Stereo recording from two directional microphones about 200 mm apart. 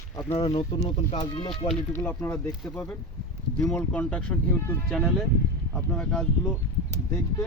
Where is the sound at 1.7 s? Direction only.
10° left (ahead or behind).